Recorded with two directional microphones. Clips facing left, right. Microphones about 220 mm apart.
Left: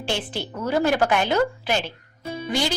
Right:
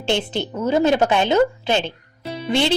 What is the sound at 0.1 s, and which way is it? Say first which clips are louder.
A woman's voice: right 7 dB; 20° right (ahead or behind).